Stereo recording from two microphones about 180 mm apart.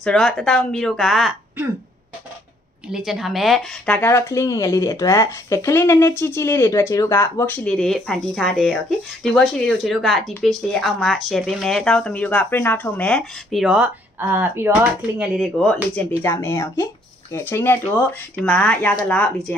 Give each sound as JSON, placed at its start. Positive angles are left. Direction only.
{"t": 0.0, "sound": "speech", "side_deg": 0}
{"t": 2.9, "sound": "speech", "side_deg": 0}